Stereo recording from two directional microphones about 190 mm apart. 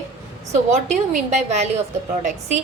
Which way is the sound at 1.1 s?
35° right (ahead or behind).